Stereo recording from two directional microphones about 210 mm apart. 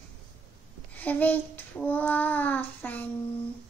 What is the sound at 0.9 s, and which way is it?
Child singing, 10° left (ahead or behind).